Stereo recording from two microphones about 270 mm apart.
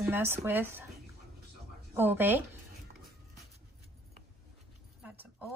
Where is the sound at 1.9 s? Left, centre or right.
Centre.